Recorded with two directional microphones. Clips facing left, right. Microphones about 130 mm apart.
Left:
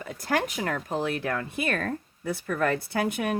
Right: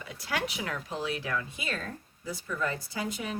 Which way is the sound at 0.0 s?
45° left (ahead or behind).